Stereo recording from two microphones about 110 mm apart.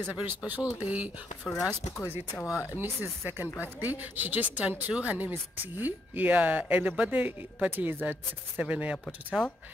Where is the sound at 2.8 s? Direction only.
15° right (ahead or behind).